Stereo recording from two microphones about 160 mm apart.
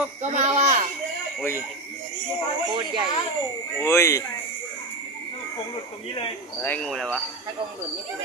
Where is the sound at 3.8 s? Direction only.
15° left (ahead or behind).